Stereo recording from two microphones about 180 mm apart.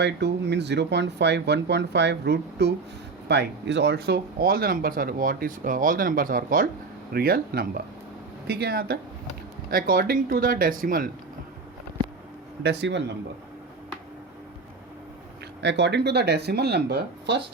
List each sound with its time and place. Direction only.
0.0 s speech: 70° right (ahead or behind); by 11.1 s 50° right (ahead or behind)
12.6 s speech: 75° right (ahead or behind)
15.6 s speech: 75° right (ahead or behind)